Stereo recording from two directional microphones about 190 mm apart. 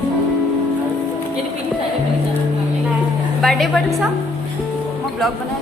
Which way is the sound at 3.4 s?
Centre (ahead or behind).